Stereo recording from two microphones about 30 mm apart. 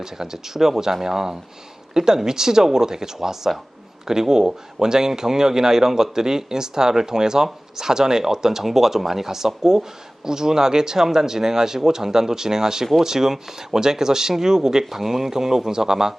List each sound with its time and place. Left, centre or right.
0.0 s speech: centre
14.8 s speech: centre